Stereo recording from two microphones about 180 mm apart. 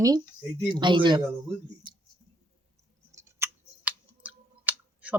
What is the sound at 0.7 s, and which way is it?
Speech, 25° right (ahead or behind).